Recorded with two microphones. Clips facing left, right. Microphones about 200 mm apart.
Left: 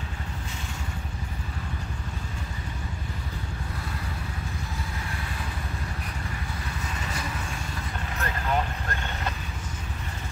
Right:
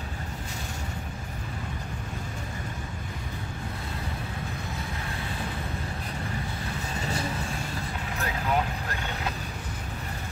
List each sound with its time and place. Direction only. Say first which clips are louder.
7.0 s vehicle: right 6 dB; 30° right (ahead or behind)
8.2 s vehicle: even; 5° right (ahead or behind)